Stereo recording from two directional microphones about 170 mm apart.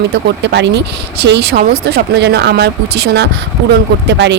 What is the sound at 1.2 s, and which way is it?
Speech, 75° right (ahead or behind).